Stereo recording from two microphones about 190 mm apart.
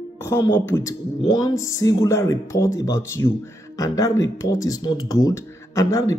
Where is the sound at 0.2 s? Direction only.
15° left (ahead or behind).